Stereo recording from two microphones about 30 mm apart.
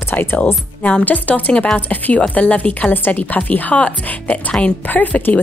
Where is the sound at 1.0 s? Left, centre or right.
Left.